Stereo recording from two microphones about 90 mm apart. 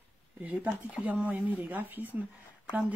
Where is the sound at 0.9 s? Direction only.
15° right (ahead or behind).